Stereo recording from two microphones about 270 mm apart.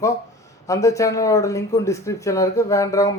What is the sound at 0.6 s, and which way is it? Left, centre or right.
Speech, centre.